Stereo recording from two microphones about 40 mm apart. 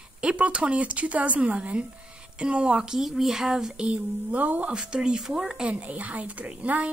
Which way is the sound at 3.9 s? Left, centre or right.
Right.